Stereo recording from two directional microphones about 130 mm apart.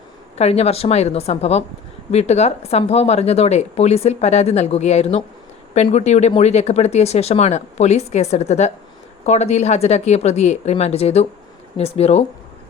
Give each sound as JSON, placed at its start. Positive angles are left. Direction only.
{"t": 0.3, "sound": "a woman's voice", "side_deg": 55}